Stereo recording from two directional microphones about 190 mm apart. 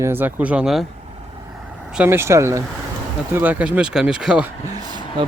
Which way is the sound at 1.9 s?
10° right (ahead or behind).